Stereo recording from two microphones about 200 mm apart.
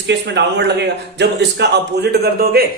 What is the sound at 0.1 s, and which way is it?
A man's voice, 60° right (ahead or behind).